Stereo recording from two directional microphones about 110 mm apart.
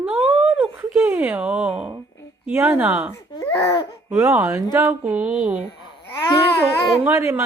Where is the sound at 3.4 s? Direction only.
20° left (ahead or behind).